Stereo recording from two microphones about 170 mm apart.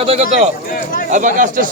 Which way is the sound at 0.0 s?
35° right (ahead or behind).